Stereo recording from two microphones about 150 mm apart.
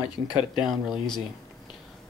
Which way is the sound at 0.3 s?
Centre (ahead or behind).